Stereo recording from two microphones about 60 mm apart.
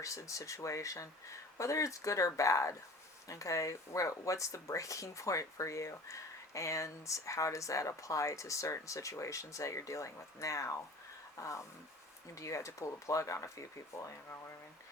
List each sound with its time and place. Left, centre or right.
0.0 s speech: left